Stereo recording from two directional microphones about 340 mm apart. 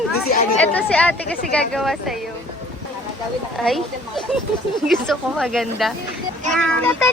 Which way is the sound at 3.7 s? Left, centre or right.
Centre.